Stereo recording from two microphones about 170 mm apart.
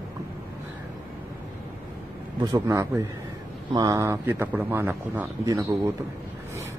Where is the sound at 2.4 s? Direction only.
20° right (ahead or behind).